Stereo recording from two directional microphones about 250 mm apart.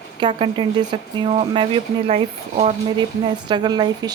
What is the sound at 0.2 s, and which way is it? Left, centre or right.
Speech, right.